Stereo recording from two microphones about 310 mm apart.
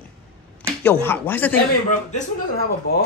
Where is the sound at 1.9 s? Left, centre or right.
Left.